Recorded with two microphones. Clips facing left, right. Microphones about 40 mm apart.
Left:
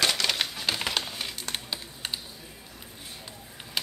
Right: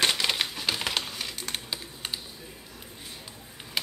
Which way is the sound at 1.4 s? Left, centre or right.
Centre.